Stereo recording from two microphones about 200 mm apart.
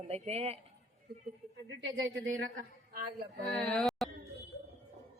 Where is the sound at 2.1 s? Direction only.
65° right (ahead or behind).